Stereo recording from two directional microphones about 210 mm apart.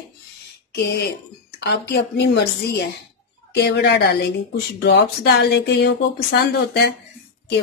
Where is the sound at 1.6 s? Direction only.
55° left (ahead or behind).